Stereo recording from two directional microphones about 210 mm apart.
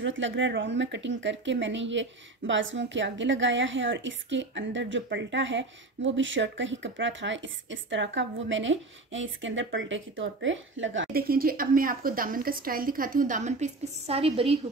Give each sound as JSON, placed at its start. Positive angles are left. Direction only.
{"t": 0.0, "sound": "a woman's voice", "side_deg": -60}
{"t": 11.1, "sound": "speech", "side_deg": -45}